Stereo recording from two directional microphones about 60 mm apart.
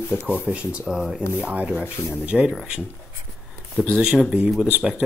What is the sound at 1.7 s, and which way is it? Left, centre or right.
Speech, left.